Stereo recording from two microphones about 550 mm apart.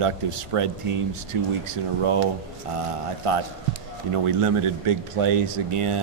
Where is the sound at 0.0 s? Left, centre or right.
Right.